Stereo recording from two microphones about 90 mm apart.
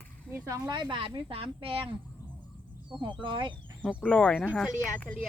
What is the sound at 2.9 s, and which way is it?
Speech, 65° right (ahead or behind).